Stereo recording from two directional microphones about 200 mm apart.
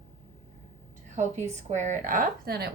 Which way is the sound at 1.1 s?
35° right (ahead or behind).